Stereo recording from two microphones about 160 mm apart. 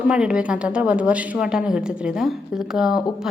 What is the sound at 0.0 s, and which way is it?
A woman's voice, 5° right (ahead or behind).